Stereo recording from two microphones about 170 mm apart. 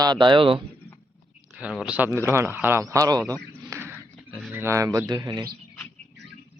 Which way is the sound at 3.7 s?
10° right (ahead or behind).